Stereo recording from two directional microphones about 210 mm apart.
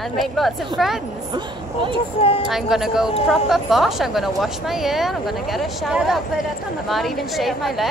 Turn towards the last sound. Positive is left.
turn(degrees=0)  # may be behind; listen again after turning